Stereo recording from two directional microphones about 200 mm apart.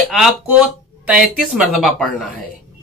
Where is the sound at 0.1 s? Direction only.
Centre (ahead or behind).